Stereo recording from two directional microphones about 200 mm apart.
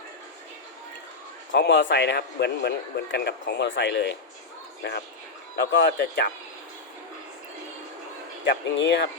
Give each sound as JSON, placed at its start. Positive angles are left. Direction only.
{"t": 1.5, "sound": "a man's voice", "side_deg": 60}
{"t": 8.7, "sound": "a man's voice", "side_deg": 60}